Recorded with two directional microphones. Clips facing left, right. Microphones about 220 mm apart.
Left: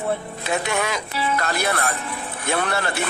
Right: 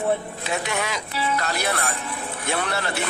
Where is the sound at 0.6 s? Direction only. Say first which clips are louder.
Left 3 dB; 50° left (ahead or behind).